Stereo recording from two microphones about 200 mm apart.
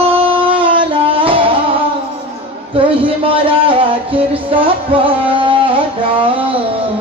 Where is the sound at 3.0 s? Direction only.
25° right (ahead or behind).